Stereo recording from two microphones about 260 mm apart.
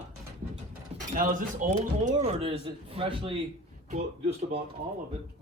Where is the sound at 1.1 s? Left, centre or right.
Right.